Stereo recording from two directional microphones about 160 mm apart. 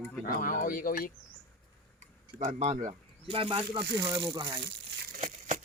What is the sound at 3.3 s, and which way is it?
Speech, 35° right (ahead or behind).